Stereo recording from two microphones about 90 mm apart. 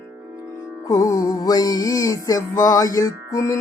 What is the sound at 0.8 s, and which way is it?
Music, 40° left (ahead or behind).